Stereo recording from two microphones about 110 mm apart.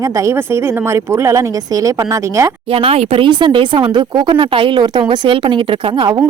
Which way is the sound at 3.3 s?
45° right (ahead or behind).